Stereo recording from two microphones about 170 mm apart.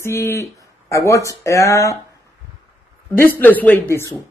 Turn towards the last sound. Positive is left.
turn(degrees=10)  # may be behind; listen again after turning